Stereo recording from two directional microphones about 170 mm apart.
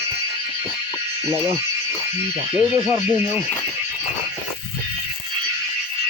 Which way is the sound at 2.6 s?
15° right (ahead or behind).